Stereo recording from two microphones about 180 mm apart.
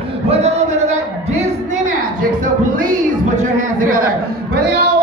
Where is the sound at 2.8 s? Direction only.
50° right (ahead or behind).